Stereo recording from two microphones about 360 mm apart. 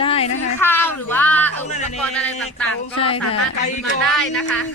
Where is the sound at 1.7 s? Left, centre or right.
Centre.